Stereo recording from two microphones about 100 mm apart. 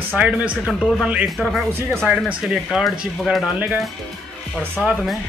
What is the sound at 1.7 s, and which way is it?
Speech, 25° right (ahead or behind).